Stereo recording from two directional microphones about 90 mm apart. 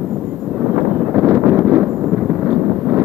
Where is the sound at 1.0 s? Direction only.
25° right (ahead or behind).